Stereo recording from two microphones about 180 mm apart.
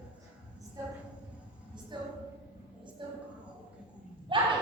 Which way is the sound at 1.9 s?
25° right (ahead or behind).